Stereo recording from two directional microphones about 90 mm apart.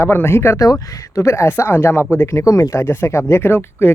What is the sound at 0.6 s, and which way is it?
Speech, 40° left (ahead or behind).